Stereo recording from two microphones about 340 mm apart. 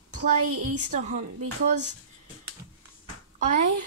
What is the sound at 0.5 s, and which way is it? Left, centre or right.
Speech, right.